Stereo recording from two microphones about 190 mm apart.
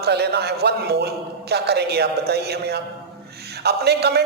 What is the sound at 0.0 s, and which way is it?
A man's voice, 60° right (ahead or behind).